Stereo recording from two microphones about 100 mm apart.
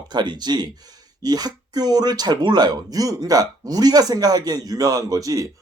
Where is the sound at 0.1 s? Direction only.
45° right (ahead or behind).